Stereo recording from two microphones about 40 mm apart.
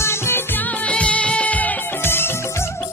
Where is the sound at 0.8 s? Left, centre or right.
Left.